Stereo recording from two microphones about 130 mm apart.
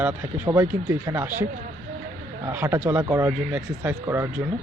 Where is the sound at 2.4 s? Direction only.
20° right (ahead or behind).